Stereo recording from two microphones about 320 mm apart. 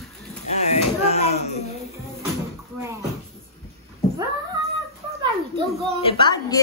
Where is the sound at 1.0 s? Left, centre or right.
Centre.